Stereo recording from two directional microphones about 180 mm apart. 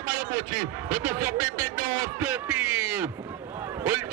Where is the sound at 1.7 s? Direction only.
45° right (ahead or behind).